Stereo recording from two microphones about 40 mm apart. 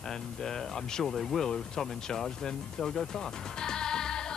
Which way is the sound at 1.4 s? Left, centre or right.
Centre.